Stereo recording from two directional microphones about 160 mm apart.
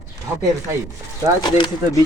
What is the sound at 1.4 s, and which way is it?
Speech, 25° left (ahead or behind).